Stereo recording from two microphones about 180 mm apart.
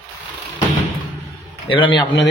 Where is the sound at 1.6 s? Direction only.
30° left (ahead or behind).